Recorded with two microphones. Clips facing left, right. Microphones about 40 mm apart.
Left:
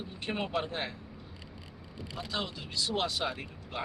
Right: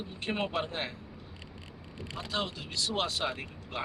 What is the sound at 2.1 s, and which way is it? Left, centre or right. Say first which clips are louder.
Speech: right 2 dB; centre.